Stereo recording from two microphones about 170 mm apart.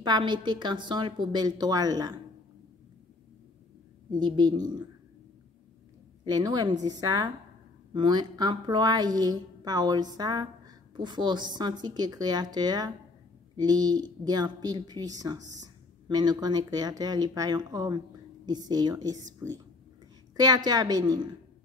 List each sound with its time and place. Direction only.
0.0 s a woman's voice: 25° right (ahead or behind)
4.1 s a woman's voice: 25° right (ahead or behind)
6.2 s a woman's voice: 25° right (ahead or behind)